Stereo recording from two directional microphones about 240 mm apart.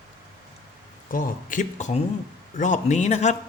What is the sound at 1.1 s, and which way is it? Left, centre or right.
Speech, left.